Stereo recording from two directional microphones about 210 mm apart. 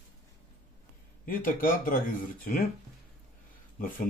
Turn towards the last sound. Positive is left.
turn(degrees=40)  # may be behind; listen again after turning